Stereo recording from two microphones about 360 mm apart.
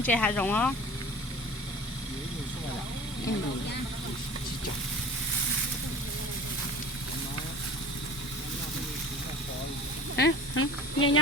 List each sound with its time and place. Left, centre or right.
0.0 s speech: centre
10.2 s speech: left